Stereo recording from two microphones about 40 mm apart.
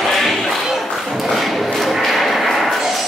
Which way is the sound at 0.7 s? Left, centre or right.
Centre.